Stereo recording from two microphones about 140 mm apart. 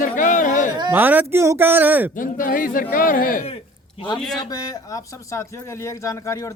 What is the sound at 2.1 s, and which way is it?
A man's voice, 80° left.